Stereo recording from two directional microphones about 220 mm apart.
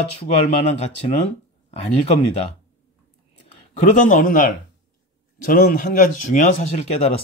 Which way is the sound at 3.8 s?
35° left (ahead or behind).